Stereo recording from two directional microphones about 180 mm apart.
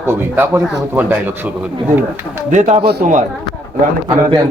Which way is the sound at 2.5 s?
40° right (ahead or behind).